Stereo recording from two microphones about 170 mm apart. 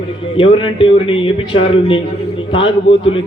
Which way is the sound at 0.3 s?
30° left (ahead or behind).